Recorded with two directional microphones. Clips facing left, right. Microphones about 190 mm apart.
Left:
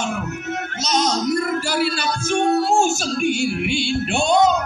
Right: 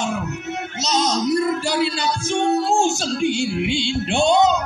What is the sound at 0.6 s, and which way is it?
Music, 20° right (ahead or behind).